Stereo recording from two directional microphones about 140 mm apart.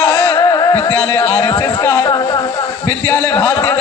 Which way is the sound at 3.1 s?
15° left (ahead or behind).